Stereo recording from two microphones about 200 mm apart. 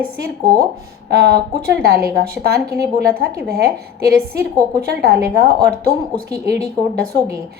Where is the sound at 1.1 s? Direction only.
50° right (ahead or behind).